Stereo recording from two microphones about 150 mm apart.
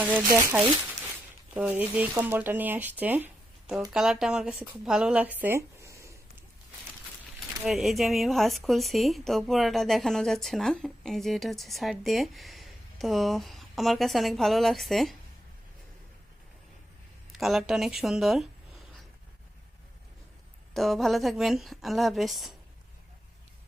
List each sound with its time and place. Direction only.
0.0 s speech: 20° right (ahead or behind)
5.4 s a sound: 15° right (ahead or behind)
7.6 s speech: centre (ahead or behind)
17.3 s speech: centre (ahead or behind)
20.7 s speech: centre (ahead or behind)